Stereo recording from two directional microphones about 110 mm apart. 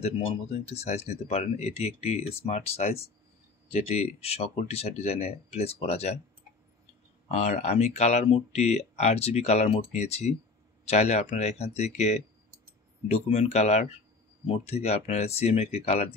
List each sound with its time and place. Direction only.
0.0 s speech: 80° left
7.2 s speech: 90° left
13.1 s speech: 75° left (ahead or behind)
14.4 s speech: 70° left (ahead or behind)